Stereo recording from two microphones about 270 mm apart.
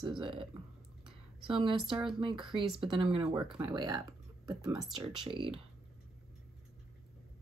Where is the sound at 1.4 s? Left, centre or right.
Centre.